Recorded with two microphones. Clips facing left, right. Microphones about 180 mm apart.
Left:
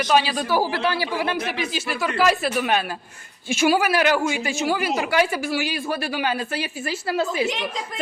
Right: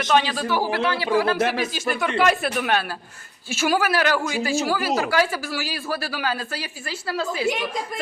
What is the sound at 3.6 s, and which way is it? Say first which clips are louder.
A woman's voice: left 2 dB; 15° left (ahead or behind).